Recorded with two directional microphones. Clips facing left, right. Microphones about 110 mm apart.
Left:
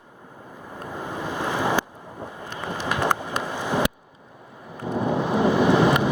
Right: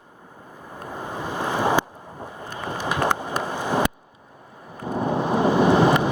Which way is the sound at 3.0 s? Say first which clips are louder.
Right 1 dB; 40° right (ahead or behind).